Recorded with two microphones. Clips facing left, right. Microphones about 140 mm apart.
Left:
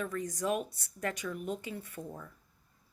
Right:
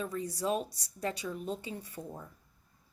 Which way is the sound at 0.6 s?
15° right (ahead or behind).